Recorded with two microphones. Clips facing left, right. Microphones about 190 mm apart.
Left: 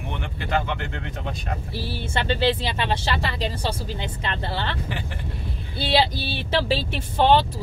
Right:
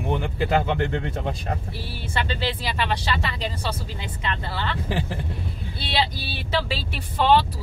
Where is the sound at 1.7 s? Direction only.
30° left (ahead or behind).